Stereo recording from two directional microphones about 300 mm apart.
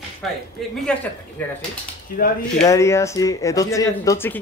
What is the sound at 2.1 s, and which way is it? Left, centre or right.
Speech, left.